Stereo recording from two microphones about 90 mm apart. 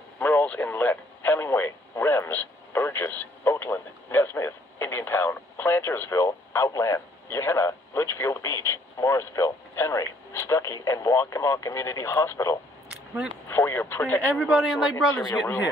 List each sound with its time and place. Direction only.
0.2 s speech: 20° left (ahead or behind); by 12.5 s 35° left (ahead or behind)
12.9 s single-lens reflex camera: 10° right (ahead or behind)
13.5 s speech: 25° left (ahead or behind)
14.3 s speech: 5° right (ahead or behind)